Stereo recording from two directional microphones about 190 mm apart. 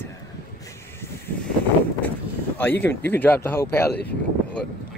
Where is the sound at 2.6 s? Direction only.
10° left (ahead or behind).